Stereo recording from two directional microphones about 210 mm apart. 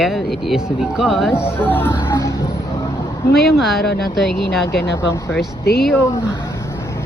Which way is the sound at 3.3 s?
50° left (ahead or behind).